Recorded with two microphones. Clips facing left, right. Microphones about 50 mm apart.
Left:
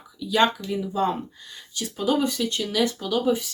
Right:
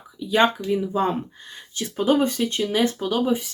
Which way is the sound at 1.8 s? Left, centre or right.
Right.